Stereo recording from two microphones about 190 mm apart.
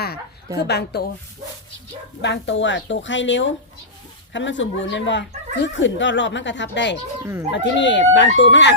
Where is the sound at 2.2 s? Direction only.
70° left (ahead or behind).